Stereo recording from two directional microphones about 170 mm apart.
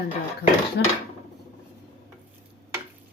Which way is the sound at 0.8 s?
90° left.